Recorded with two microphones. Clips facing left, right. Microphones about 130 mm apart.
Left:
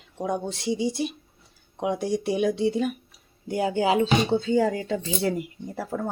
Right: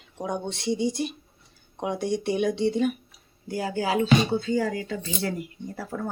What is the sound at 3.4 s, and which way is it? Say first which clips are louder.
Speech: left 4 dB; 20° left (ahead or behind).